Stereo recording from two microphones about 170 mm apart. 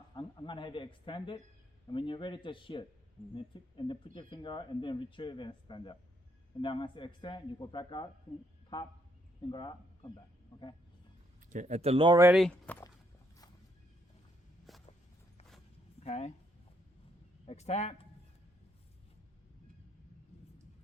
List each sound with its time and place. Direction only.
0.1 s speech: 25° left (ahead or behind)
9.5 s speech: 25° left (ahead or behind)
11.4 s speech: 45° right (ahead or behind)
12.3 s speech: centre (ahead or behind)
14.7 s walk: centre (ahead or behind)
16.0 s a man's voice: 35° left (ahead or behind)
17.4 s a man's voice: 40° left (ahead or behind)